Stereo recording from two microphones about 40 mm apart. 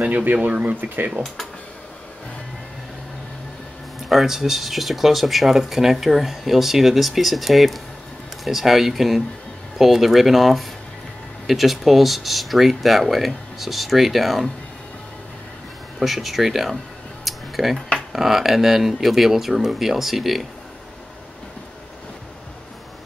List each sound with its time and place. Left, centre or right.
0.0 s speech: right
0.5 s speech: right
0.7 s speech: right
4.1 s speech: centre
16.0 s speech: centre